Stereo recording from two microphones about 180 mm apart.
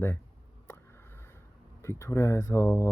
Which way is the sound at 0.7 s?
15° left (ahead or behind).